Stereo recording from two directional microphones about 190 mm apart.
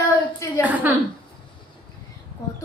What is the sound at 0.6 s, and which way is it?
Speech, 10° right (ahead or behind).